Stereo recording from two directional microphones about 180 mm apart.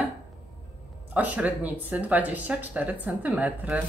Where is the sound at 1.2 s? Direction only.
10° right (ahead or behind).